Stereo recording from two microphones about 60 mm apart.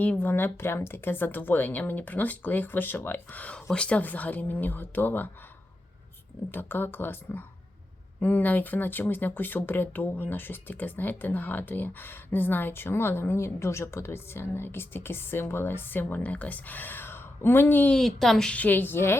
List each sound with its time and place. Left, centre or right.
0.2 s speech: left
6.5 s speech: left
17.9 s a woman's voice: centre
18.4 s speech: left